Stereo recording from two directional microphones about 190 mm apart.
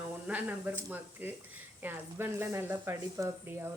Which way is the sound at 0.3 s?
10° right (ahead or behind).